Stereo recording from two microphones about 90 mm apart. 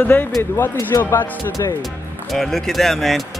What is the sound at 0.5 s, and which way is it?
Speech, 35° left (ahead or behind).